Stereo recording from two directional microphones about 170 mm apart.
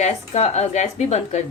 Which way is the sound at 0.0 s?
40° left (ahead or behind).